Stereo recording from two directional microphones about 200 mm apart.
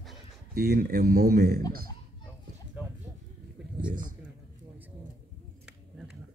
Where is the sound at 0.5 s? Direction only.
50° right (ahead or behind).